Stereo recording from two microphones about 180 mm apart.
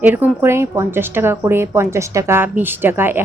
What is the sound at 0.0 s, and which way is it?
A woman's voice, 10° right (ahead or behind).